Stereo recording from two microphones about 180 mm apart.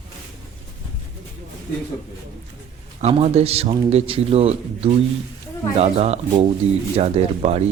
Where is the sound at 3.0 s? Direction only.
35° right (ahead or behind).